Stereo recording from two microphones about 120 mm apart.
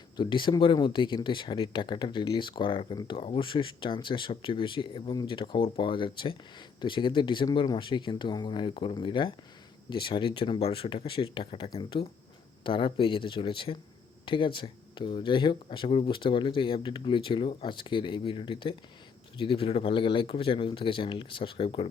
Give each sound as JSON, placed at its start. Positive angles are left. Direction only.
{"t": 0.2, "sound": "speech", "side_deg": 40}